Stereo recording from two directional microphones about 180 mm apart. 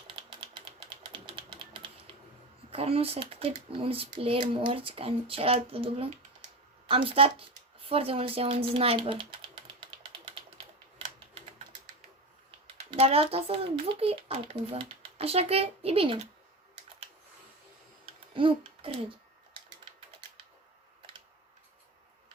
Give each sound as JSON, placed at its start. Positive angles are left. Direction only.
{"t": 0.2, "sound": "typewriter", "side_deg": -25}
{"t": 2.7, "sound": "speech", "side_deg": -35}
{"t": 12.9, "sound": "speech", "side_deg": -35}
{"t": 18.3, "sound": "speech", "side_deg": -30}